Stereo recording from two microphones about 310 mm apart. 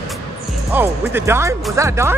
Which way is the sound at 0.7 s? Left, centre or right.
Centre.